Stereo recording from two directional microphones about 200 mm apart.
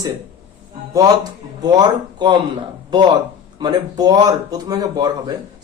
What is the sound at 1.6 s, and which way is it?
Speech, 20° right (ahead or behind).